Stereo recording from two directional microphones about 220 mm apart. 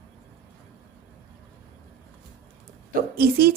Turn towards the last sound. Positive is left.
turn(degrees=-45)  # may be behind; listen again after turning